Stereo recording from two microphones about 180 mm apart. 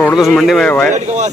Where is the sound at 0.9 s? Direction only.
40° right (ahead or behind).